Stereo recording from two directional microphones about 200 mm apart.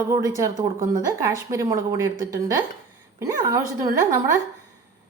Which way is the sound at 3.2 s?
15° right (ahead or behind).